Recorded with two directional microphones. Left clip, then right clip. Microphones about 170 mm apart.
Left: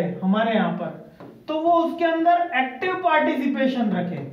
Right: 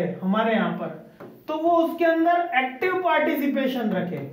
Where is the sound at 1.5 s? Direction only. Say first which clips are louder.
Left 1 dB; 15° right (ahead or behind).